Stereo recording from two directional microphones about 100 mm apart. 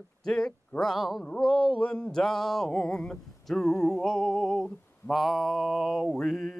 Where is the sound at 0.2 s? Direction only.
5° left (ahead or behind).